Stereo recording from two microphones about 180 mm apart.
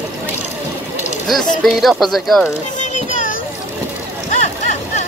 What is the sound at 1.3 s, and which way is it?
Speech, centre (ahead or behind).